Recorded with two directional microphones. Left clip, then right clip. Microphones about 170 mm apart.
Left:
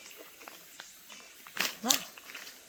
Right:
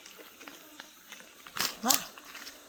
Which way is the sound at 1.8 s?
10° right (ahead or behind).